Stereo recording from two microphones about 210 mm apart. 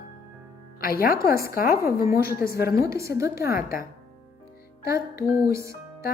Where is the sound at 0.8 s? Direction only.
45° left (ahead or behind).